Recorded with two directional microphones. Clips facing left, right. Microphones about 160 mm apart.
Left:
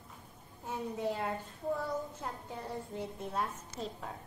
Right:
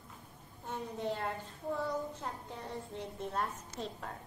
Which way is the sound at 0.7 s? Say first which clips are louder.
Left 2 dB; 5° left (ahead or behind).